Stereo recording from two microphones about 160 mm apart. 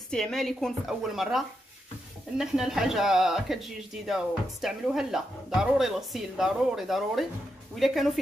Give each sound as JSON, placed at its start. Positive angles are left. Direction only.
{"t": 0.1, "sound": "speech", "side_deg": 5}